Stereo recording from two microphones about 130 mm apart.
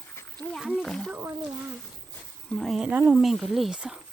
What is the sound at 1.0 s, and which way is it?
Speech, 15° right (ahead or behind).